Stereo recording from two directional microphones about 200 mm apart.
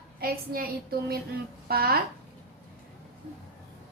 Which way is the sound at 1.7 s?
50° right (ahead or behind).